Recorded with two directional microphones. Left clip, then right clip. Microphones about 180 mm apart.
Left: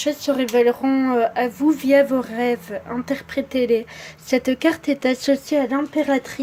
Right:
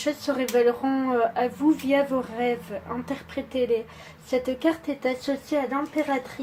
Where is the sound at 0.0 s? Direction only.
30° left (ahead or behind).